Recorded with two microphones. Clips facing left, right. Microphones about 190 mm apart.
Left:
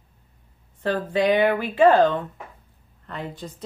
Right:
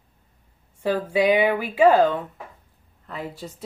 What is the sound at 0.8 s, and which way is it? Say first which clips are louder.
A woman's voice: right 1 dB; 10° right (ahead or behind).